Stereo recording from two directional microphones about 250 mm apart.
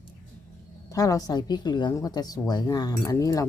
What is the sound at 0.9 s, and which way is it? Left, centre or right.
A woman's voice, centre.